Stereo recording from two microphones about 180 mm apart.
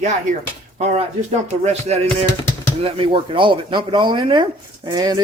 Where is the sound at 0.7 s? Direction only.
35° right (ahead or behind).